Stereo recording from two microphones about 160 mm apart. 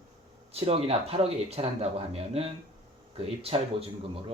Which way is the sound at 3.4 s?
40° right (ahead or behind).